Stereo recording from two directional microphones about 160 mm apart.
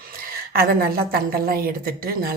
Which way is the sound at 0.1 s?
70° right (ahead or behind).